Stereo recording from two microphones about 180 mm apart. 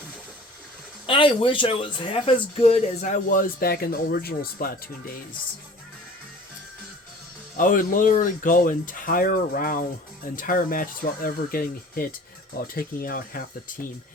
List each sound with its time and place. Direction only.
1.0 s speech: 30° left (ahead or behind); by 5.1 s 55° left (ahead or behind)
7.5 s speech: 45° left (ahead or behind)